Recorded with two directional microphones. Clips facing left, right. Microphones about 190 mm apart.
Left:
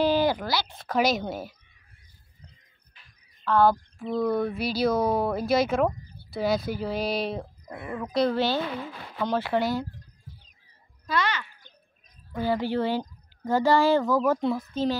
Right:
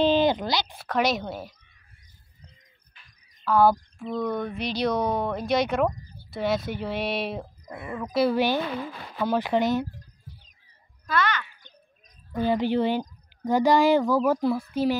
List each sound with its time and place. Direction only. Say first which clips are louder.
0.0 s speech: right 2 dB; 20° right (ahead or behind)
0.8 s speech: left 1 dB; centre (ahead or behind)
3.4 s a child's voice: right 1 dB; 10° right (ahead or behind)
4.0 s a child's voice: left 4 dB; 5° left (ahead or behind); by 9.8 s 20° right (ahead or behind)
11.1 s speech: right 1 dB; 30° left (ahead or behind)
12.3 s a child's voice: right 3 dB; 20° right (ahead or behind)